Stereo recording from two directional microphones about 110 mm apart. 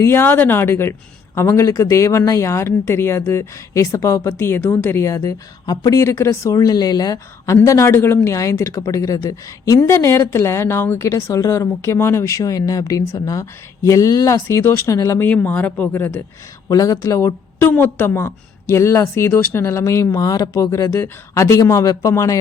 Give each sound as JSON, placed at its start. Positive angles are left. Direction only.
{"t": 0.0, "sound": "speech", "side_deg": 20}
{"t": 15.3, "sound": "speech", "side_deg": 15}
{"t": 16.6, "sound": "speech", "side_deg": 30}